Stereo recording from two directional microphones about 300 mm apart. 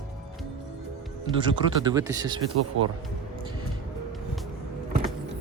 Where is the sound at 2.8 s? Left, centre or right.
Right.